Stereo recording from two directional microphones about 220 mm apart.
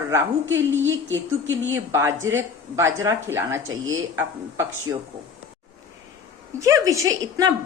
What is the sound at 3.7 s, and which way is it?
Speech, 65° right (ahead or behind).